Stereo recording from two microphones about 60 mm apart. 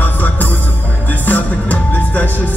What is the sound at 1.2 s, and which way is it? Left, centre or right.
Music, left.